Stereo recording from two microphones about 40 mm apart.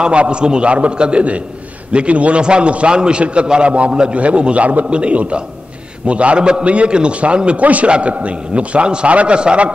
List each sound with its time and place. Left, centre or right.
0.0 s a man's voice: right